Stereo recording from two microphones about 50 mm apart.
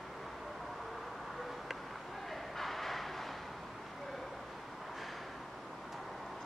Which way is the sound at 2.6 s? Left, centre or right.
Centre.